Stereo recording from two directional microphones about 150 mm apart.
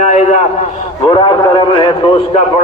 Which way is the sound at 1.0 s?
30° left (ahead or behind).